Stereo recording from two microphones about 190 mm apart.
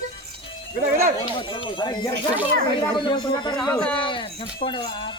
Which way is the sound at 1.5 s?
25° left (ahead or behind).